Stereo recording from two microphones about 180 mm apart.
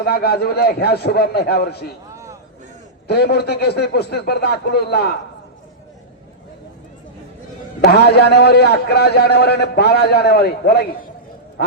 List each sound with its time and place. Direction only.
0.0 s a man's voice: 60° left (ahead or behind)
2.1 s a sound: 15° right (ahead or behind)
3.1 s a man's voice: 65° left (ahead or behind)
7.8 s a man's voice: 65° left (ahead or behind)